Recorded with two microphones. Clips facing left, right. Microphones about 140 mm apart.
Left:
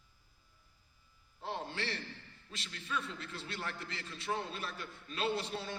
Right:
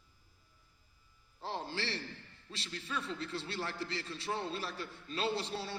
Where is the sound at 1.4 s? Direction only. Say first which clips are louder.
Right 1 dB; 30° right (ahead or behind).